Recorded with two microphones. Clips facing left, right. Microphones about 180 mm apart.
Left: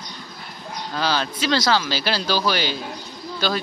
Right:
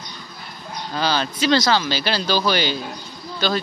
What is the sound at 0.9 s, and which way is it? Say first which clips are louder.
A man's voice: right 1 dB; centre (ahead or behind).